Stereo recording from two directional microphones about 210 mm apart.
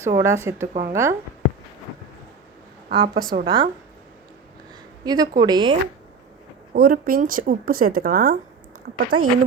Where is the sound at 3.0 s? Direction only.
45° right (ahead or behind).